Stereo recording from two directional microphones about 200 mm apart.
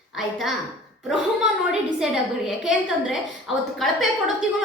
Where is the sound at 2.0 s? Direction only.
Centre (ahead or behind).